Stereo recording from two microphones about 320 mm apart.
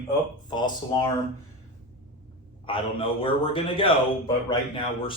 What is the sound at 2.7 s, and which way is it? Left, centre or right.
Speech, centre.